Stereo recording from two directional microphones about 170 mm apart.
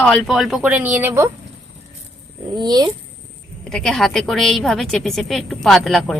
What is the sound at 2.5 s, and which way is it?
Speech, 25° right (ahead or behind).